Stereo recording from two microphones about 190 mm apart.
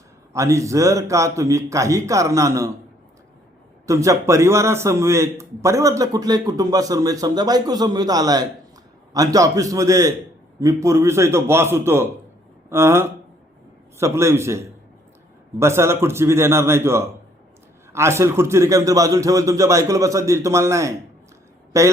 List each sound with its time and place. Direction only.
0.3 s a man's voice: 15° right (ahead or behind)
3.8 s a man's voice: 15° right (ahead or behind)